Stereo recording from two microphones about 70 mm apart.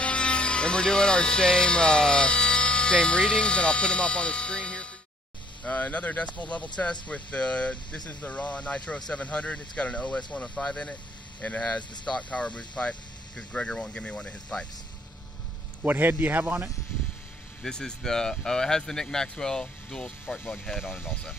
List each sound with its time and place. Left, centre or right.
0.0 s speech: centre
15.8 s a man's voice: right
17.6 s speech: centre
20.3 s speech: left